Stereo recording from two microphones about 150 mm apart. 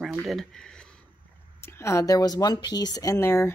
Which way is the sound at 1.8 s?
20° left (ahead or behind).